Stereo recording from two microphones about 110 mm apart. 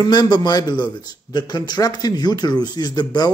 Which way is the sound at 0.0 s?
40° left (ahead or behind).